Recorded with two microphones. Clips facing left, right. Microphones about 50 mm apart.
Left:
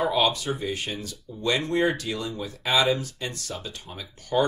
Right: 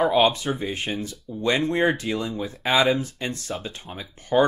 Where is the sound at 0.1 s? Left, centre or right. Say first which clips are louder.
Right 4 dB; right.